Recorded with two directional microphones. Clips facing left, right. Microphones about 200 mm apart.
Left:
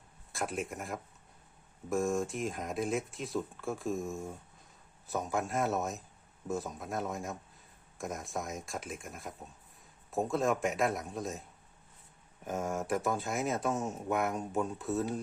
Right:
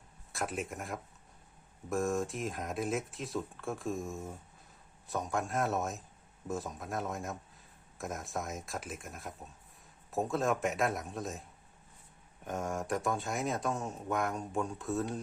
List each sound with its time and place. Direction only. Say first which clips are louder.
0.3 s speech: left 1 dB; centre (ahead or behind)
12.5 s speech: left 2 dB; centre (ahead or behind)